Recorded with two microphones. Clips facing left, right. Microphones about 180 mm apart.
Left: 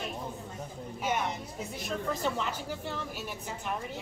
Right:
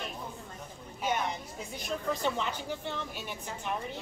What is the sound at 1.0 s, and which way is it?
A woman's voice, 5° left (ahead or behind).